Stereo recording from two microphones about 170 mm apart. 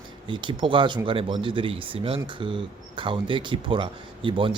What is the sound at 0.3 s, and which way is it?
Speech, 30° right (ahead or behind).